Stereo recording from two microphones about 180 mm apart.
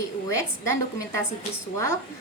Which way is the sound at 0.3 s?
15° left (ahead or behind).